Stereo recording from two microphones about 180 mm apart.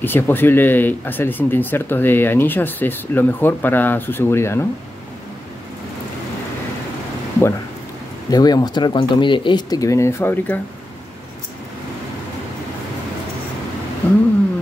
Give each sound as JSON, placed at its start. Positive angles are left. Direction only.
{"t": 0.0, "sound": "speech", "side_deg": 10}
{"t": 8.3, "sound": "speech", "side_deg": 20}
{"t": 14.0, "sound": "a sound", "side_deg": 10}